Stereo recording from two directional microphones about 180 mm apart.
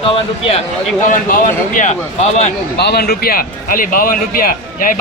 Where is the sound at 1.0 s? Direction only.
45° left (ahead or behind).